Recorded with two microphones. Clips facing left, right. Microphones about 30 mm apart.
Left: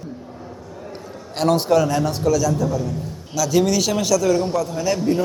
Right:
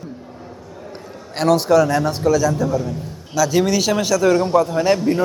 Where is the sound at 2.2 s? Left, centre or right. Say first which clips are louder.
Right 2 dB; right.